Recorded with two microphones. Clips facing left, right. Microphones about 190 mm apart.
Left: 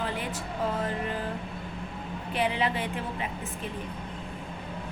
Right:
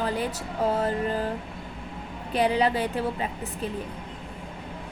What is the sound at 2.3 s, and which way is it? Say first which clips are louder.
Speech: right 5 dB; 40° right (ahead or behind).